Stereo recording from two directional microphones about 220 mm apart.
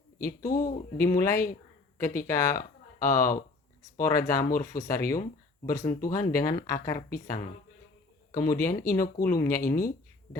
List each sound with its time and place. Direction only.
0.6 s speech: 15° left (ahead or behind)
8.3 s speech: 15° left (ahead or behind)
9.6 s speech: 40° left (ahead or behind)